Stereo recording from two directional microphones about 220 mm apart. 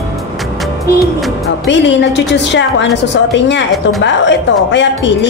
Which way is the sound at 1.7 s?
55° left (ahead or behind).